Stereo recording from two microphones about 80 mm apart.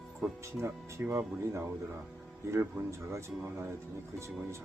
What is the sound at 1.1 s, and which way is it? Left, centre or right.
Speech, right.